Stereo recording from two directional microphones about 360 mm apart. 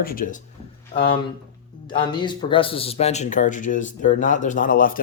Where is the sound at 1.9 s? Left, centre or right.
Centre.